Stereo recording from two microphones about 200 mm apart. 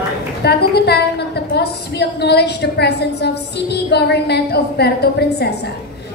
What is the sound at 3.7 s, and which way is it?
A woman's voice, 55° left (ahead or behind).